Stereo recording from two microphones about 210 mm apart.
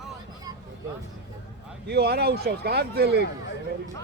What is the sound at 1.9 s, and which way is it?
A man's voice, 50° right (ahead or behind).